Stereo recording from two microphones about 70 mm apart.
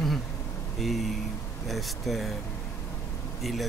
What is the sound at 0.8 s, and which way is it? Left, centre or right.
Speech, centre.